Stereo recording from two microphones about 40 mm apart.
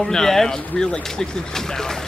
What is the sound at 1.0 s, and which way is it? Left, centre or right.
Speech, centre.